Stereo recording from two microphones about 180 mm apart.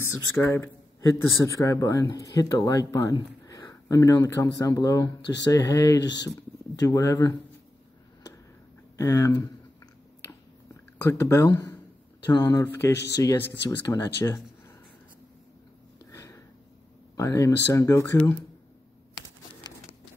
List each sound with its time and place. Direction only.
0.0 s speech: 15° left (ahead or behind)
8.9 s speech: 15° left (ahead or behind)
11.1 s speech: 15° left (ahead or behind)
12.9 s speech: 70° left (ahead or behind)
13.2 s speech: 20° left (ahead or behind)
16.1 s sniff: 15° left (ahead or behind)
17.2 s speech: 15° left (ahead or behind)